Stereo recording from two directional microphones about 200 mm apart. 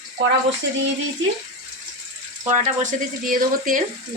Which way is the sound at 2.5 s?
40° right (ahead or behind).